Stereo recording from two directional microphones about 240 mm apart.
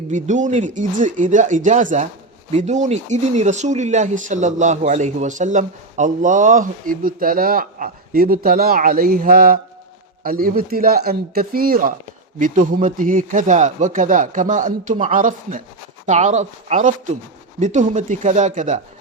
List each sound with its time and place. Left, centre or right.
0.1 s speech: right